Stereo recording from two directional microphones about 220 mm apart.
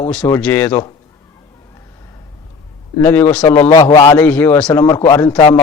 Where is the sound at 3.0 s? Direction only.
10° left (ahead or behind).